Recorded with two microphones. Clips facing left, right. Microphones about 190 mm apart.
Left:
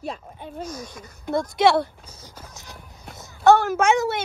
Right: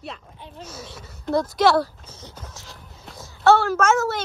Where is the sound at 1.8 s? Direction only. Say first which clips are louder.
Right 1 dB; 10° left (ahead or behind).